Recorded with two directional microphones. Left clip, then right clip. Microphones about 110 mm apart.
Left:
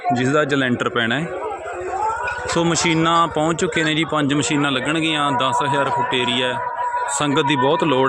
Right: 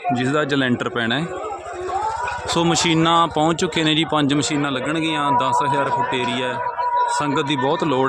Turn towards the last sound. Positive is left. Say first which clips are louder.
# left 2 dB
turn(degrees=20)  # may be behind; listen again after turning